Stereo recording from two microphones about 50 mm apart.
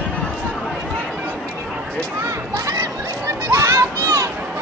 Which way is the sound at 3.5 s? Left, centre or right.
Right.